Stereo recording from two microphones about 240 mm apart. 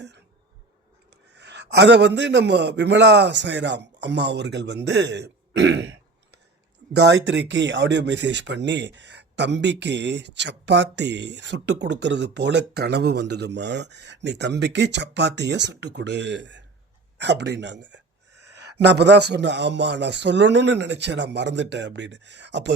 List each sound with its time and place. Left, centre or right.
1.4 s speech: right
5.5 s throat clearing: right
6.9 s speech: right